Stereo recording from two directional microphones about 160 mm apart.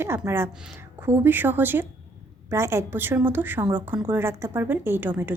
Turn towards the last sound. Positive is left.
turn(degrees=-10)  # may be behind; listen again after turning